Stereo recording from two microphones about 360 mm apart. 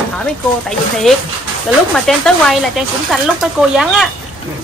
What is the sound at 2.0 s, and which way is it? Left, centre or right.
A woman's voice, centre.